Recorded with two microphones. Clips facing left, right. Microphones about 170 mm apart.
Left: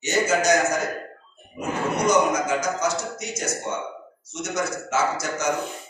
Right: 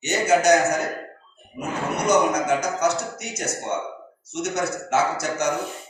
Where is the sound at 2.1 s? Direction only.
65° right (ahead or behind).